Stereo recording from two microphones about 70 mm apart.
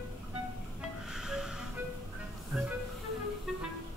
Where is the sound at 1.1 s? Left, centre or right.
Centre.